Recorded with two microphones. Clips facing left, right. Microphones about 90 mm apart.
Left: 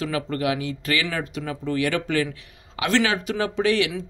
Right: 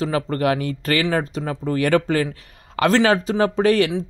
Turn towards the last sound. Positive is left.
turn(degrees=-40)  # may be behind; listen again after turning